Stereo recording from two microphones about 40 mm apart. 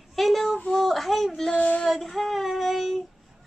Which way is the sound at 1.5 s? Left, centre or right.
Left.